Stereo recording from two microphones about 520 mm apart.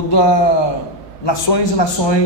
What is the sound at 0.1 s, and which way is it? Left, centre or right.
A man's voice, left.